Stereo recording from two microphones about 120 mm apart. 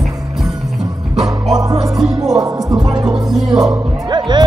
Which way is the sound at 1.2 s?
Centre (ahead or behind).